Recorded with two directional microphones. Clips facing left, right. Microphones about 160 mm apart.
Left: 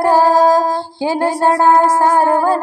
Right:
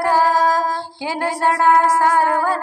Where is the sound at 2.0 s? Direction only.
25° left (ahead or behind).